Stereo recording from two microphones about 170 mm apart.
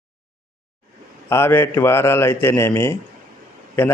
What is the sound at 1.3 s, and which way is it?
A man's voice, 15° left (ahead or behind).